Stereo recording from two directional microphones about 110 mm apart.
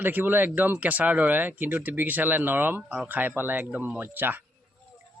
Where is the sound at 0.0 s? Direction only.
20° right (ahead or behind).